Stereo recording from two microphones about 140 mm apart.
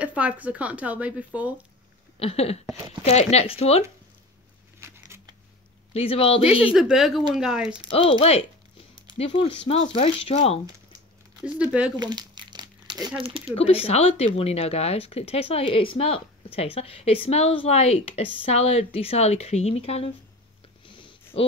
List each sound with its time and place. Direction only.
0.0 s speech: 10° right (ahead or behind)
2.1 s speech: 45° left (ahead or behind)
4.7 s a sound: 20° right (ahead or behind)
5.9 s speech: 45° left (ahead or behind)
6.6 s speech: 5° right (ahead or behind)
7.9 s speech: 40° left (ahead or behind)
11.4 s speech: 10° right (ahead or behind)
12.0 s crumpling: 30° right (ahead or behind)
13.2 s speech: 40° right (ahead or behind)
13.6 s speech: 45° left (ahead or behind)
20.8 s a sound: 35° left (ahead or behind)